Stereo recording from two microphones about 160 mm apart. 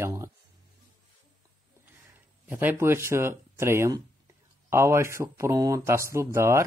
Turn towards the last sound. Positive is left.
turn(degrees=-15)  # may be behind; listen again after turning